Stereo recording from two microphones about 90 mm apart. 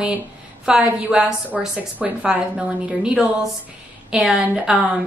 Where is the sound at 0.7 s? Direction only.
10° right (ahead or behind).